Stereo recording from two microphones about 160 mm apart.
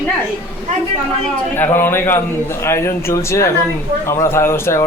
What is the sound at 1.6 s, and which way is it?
A man's voice, 15° left (ahead or behind).